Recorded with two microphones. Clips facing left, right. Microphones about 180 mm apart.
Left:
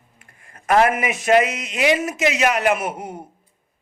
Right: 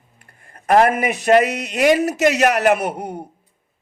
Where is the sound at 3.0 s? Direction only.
65° right (ahead or behind).